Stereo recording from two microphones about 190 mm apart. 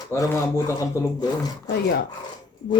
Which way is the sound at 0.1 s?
15° left (ahead or behind).